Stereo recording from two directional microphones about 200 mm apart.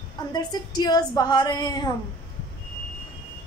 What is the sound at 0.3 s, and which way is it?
Speech, 20° left (ahead or behind).